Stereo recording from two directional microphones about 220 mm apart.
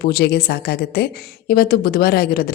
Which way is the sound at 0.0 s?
45° left (ahead or behind).